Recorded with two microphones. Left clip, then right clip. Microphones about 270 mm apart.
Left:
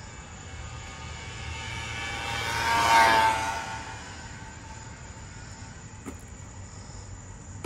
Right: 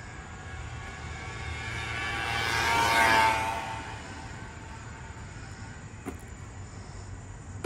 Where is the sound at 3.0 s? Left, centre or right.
Left.